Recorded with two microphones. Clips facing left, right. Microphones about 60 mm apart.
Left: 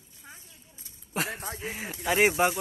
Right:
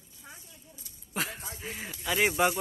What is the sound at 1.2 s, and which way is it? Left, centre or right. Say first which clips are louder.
Speech: left 6 dB; left.